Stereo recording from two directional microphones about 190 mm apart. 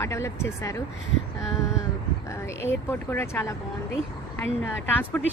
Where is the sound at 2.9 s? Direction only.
15° left (ahead or behind).